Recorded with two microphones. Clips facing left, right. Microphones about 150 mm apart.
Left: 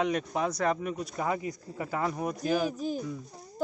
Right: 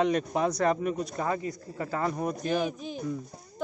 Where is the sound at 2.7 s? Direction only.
40° left (ahead or behind).